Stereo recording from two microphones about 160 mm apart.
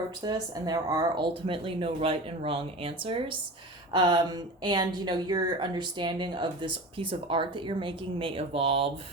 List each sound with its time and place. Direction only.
0.2 s a woman's voice: 25° right (ahead or behind)
1.5 s a woman's voice: 35° right (ahead or behind)